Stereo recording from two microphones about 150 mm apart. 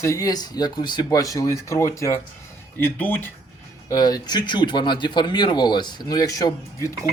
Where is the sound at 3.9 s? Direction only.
25° left (ahead or behind).